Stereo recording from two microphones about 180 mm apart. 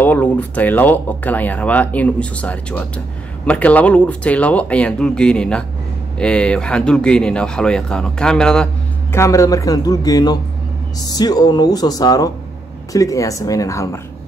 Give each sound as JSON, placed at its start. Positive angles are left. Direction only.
{"t": 0.0, "sound": "speech", "side_deg": 10}
{"t": 9.1, "sound": "a man's voice", "side_deg": 15}